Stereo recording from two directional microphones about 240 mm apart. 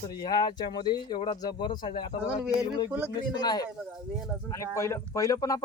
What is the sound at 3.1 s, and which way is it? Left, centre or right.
Speech, centre.